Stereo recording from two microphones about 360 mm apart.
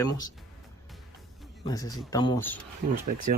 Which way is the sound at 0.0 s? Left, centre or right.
Centre.